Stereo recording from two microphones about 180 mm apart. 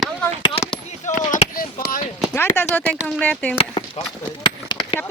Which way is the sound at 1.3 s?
50° left (ahead or behind).